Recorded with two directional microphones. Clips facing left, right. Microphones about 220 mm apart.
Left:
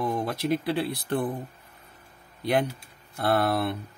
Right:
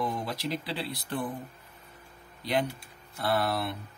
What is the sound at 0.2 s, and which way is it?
A man's voice, 55° left (ahead or behind).